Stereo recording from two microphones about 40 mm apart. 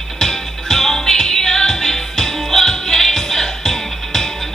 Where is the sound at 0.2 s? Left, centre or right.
Centre.